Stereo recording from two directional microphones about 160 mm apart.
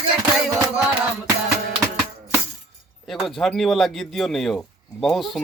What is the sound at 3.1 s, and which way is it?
Speech, centre (ahead or behind).